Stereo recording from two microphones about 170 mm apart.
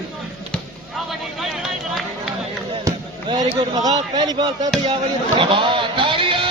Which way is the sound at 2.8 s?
25° right (ahead or behind).